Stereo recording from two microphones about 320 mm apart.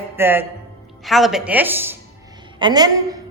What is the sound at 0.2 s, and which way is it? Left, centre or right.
A woman's voice, centre.